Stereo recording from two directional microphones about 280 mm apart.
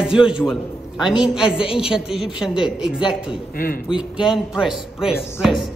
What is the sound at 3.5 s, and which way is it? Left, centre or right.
Speech, left.